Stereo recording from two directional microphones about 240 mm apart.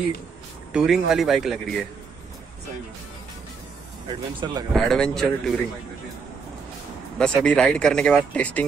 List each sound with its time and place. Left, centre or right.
0.7 s speech: centre
4.1 s speech: centre
4.7 s speech: centre
7.2 s speech: centre